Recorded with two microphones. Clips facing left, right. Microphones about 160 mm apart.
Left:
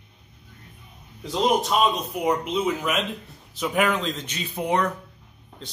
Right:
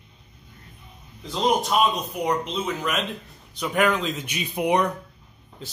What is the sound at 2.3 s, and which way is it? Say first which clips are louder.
Speech: left 4 dB; 10° left (ahead or behind).